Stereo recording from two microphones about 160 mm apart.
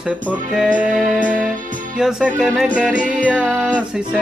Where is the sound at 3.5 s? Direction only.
10° right (ahead or behind).